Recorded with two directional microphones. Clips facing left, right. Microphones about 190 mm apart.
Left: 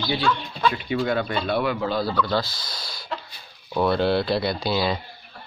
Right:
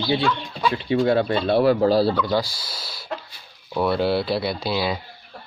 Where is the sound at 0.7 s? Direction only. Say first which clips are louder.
Right 5 dB; 30° right (ahead or behind).